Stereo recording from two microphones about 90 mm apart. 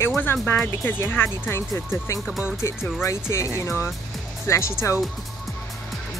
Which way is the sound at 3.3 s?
35° left (ahead or behind).